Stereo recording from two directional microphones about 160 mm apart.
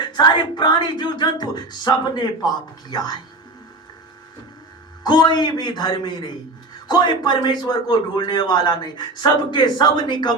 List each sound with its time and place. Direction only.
0.0 s a man's voice: 25° left (ahead or behind)
5.0 s a man's voice: 25° left (ahead or behind)